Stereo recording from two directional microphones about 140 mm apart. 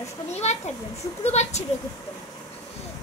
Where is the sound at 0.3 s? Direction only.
50° left (ahead or behind).